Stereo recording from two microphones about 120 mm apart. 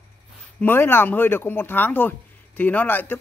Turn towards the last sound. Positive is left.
turn(degrees=15)  # may be behind; listen again after turning